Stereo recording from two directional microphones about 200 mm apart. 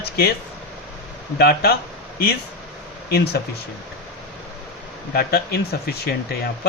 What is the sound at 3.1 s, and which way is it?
Speech, 55° left (ahead or behind).